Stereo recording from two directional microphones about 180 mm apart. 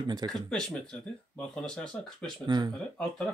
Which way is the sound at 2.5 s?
20° right (ahead or behind).